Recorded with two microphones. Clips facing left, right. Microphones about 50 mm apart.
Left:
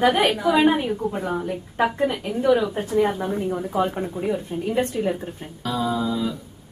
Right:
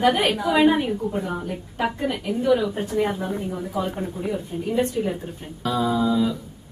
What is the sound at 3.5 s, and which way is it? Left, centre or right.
A woman's voice, left.